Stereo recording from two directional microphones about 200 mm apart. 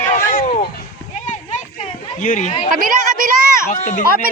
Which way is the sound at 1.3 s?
35° left (ahead or behind).